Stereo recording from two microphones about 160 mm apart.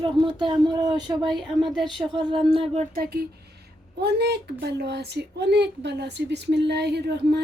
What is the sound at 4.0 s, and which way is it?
A woman's voice, 90° right.